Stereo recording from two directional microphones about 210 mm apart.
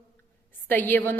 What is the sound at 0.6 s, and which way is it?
Speech, 10° left (ahead or behind).